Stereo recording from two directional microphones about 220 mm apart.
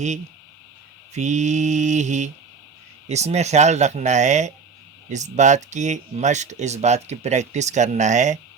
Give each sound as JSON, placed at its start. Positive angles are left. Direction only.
{"t": 1.1, "sound": "speech", "side_deg": -30}